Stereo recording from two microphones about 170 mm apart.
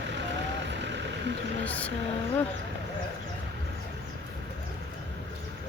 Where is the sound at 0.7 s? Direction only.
90° right.